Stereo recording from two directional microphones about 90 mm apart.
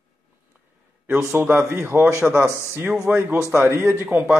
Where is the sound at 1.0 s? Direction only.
25° right (ahead or behind).